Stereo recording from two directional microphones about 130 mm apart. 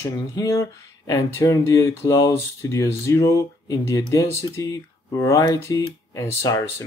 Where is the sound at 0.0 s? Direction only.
25° left (ahead or behind).